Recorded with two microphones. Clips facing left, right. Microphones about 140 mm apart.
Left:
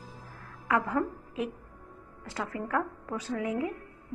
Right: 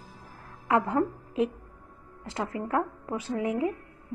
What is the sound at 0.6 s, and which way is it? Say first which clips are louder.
A woman's voice: right 3 dB; 25° right (ahead or behind).